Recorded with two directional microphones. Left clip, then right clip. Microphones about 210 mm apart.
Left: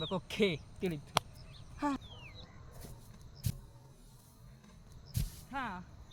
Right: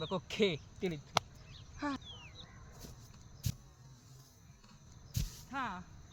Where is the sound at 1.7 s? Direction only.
20° left (ahead or behind).